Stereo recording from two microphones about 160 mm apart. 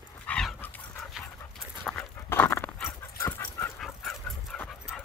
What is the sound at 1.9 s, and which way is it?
Dog, 5° left (ahead or behind).